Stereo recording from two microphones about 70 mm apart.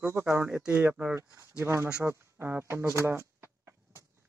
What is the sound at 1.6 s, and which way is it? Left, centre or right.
Speech, right.